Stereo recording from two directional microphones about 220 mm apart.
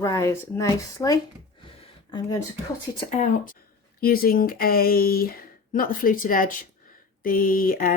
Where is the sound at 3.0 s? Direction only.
35° left (ahead or behind).